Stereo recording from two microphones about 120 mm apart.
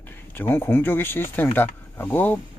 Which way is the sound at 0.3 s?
20° left (ahead or behind).